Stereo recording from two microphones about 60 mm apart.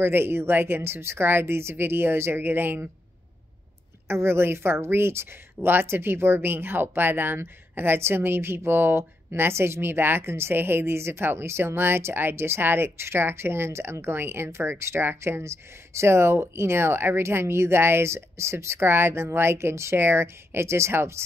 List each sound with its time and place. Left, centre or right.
0.0 s a woman's voice: right
4.1 s a woman's voice: right